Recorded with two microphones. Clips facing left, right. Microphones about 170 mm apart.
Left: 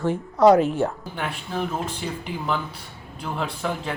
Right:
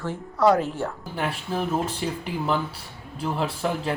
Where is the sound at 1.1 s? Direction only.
5° right (ahead or behind).